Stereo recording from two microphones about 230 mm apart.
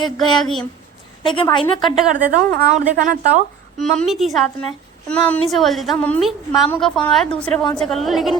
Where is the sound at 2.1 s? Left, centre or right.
Right.